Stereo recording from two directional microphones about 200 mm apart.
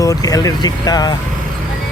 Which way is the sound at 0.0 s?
15° left (ahead or behind).